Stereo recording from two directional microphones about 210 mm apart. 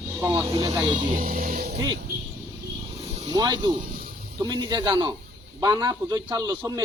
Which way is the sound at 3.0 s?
30° right (ahead or behind).